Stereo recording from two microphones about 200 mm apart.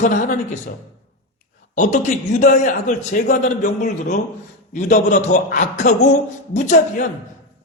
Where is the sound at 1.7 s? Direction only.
40° left (ahead or behind).